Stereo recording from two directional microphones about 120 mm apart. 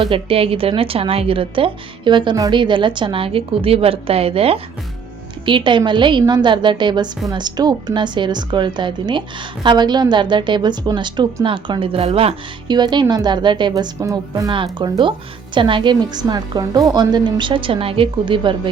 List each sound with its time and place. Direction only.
0.0 s a woman's voice: 50° right (ahead or behind)
5.5 s a woman's voice: 40° right (ahead or behind)
12.6 s a woman's voice: 35° right (ahead or behind)
14.5 s a woman's voice: 45° right (ahead or behind)